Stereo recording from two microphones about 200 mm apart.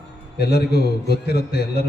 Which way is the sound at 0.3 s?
55° left (ahead or behind).